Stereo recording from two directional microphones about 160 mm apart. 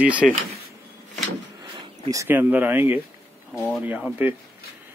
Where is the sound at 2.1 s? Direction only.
15° right (ahead or behind).